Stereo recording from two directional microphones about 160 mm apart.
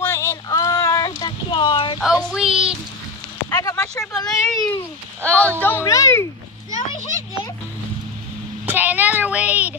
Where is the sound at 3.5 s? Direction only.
25° left (ahead or behind).